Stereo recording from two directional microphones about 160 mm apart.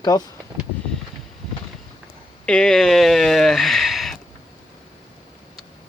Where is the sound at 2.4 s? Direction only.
5° left (ahead or behind).